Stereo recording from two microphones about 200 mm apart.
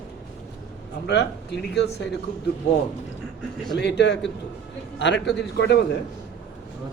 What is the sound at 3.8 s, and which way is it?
A man's voice, 60° left (ahead or behind).